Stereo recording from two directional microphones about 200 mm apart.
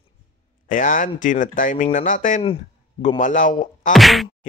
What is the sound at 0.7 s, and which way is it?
A man's voice, 40° left (ahead or behind).